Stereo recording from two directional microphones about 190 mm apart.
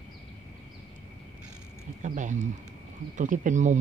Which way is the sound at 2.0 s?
40° right (ahead or behind).